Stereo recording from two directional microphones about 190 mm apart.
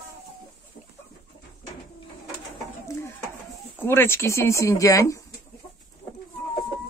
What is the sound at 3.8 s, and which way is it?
Speech, 10° left (ahead or behind).